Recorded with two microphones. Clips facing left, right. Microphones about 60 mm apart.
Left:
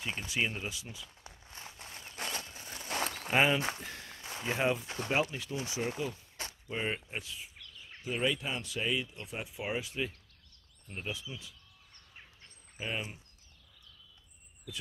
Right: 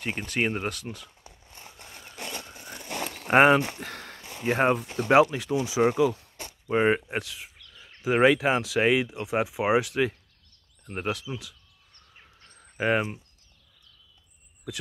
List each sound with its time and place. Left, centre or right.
0.0 s speech: right
3.3 s speech: right
5.1 s speech: right
6.7 s speech: right
10.9 s speech: right
12.5 s cricket: right
14.7 s speech: right